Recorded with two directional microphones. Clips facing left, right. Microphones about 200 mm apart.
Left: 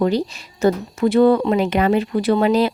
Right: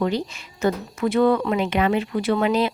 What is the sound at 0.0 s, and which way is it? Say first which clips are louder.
Speech: left 5 dB; 35° left (ahead or behind).